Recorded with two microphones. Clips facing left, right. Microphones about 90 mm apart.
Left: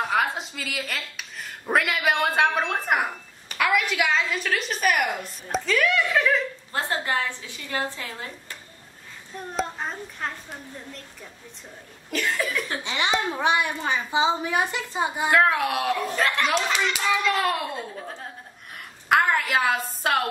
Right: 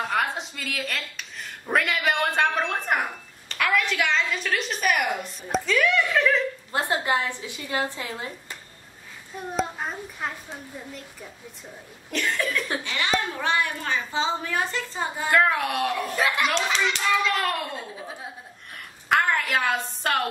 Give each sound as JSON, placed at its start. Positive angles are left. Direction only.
{"t": 0.0, "sound": "a woman's voice", "side_deg": 0}
{"t": 6.7, "sound": "speech", "side_deg": -20}
{"t": 9.5, "sound": "a child's voice", "side_deg": -5}
{"t": 12.1, "sound": "a child's voice", "side_deg": 5}
{"t": 12.8, "sound": "a child's voice", "side_deg": 20}
{"t": 15.3, "sound": "a child's voice", "side_deg": 0}
{"t": 16.5, "sound": "a child's voice", "side_deg": 5}